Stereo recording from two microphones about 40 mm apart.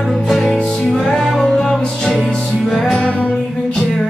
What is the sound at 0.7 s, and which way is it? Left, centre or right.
Music, centre.